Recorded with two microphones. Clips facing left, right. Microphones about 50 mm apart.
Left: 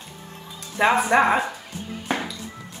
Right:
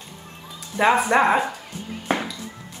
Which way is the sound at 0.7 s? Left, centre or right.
Centre.